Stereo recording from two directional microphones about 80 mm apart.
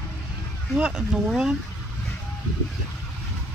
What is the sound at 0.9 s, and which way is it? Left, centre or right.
Speech, centre.